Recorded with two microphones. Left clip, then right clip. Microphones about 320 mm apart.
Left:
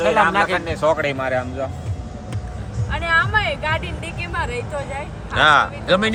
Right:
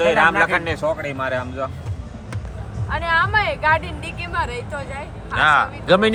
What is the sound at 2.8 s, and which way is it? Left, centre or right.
Speech, centre.